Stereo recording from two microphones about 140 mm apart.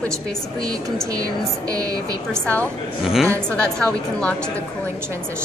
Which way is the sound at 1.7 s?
25° right (ahead or behind).